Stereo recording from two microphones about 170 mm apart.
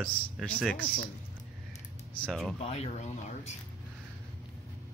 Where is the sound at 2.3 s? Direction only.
Centre (ahead or behind).